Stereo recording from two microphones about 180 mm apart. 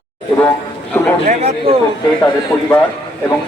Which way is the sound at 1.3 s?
35° right (ahead or behind).